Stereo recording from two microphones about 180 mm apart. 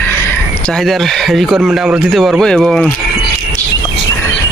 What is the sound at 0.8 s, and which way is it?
Speech, centre (ahead or behind).